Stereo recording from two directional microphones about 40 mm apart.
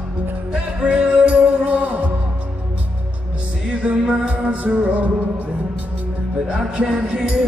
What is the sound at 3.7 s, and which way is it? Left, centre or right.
Music, right.